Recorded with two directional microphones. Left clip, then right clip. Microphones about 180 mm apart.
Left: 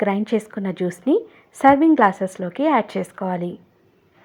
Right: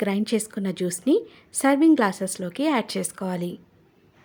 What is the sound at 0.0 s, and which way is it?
A woman's voice, 15° right (ahead or behind).